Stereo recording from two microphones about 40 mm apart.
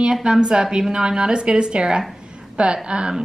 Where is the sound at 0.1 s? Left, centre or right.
Centre.